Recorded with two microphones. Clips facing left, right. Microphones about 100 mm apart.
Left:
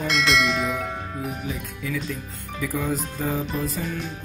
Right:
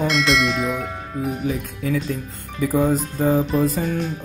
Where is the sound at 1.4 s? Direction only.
45° right (ahead or behind).